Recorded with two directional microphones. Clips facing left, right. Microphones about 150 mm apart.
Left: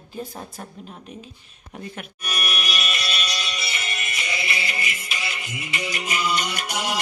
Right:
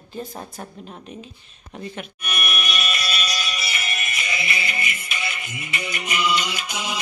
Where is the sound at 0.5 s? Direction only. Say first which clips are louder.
Right 2 dB; centre (ahead or behind).